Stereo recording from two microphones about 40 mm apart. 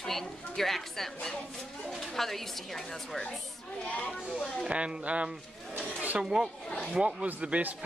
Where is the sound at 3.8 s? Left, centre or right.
Left.